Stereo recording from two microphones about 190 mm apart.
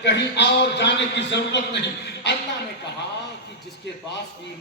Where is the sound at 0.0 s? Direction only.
65° left (ahead or behind).